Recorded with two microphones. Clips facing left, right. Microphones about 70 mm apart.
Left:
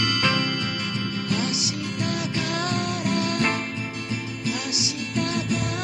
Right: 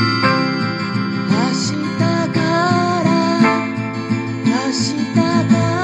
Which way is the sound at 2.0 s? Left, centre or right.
Right.